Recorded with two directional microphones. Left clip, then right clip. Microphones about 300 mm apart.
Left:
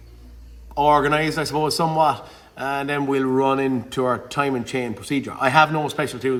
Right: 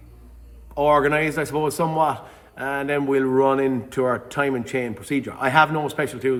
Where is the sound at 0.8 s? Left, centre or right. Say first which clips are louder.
Left 1 dB; centre.